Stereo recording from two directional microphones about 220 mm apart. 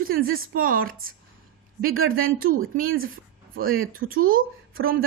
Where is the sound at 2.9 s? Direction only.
65° right (ahead or behind).